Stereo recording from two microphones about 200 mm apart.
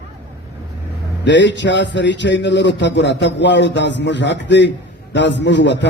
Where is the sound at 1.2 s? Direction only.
60° left (ahead or behind).